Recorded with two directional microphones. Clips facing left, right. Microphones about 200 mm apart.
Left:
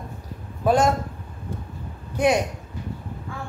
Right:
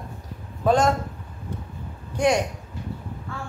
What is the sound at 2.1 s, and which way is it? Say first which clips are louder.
Speech: left 1 dB; 5° left (ahead or behind).